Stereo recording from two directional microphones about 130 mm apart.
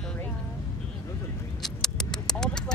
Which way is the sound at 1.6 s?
5° left (ahead or behind).